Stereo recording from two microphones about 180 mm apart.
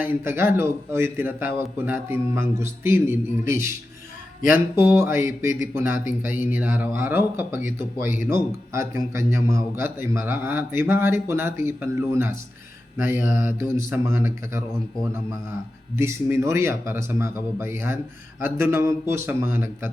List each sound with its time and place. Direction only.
0.0 s a man's voice: 10° right (ahead or behind)
8.0 s speech: 45° left (ahead or behind)
8.7 s a man's voice: 15° right (ahead or behind)
16.0 s a man's voice: 15° right (ahead or behind)